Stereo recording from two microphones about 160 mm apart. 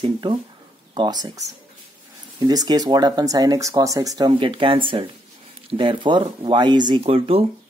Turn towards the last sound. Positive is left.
turn(degrees=-35)  # may be behind; listen again after turning